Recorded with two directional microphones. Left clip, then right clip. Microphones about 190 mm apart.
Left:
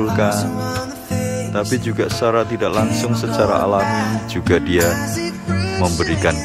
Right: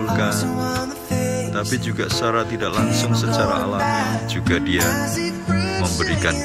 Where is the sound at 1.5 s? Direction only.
20° left (ahead or behind).